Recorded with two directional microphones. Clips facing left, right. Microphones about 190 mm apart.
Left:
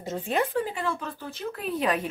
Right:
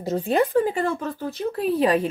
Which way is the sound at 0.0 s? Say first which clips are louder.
Right 6 dB; 35° right (ahead or behind).